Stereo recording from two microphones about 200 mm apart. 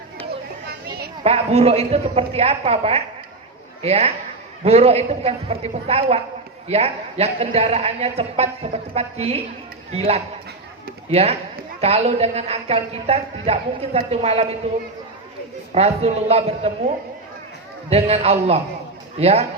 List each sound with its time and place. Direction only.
1.2 s a woman's voice: 30° right (ahead or behind)
17.8 s a woman's voice: 30° right (ahead or behind)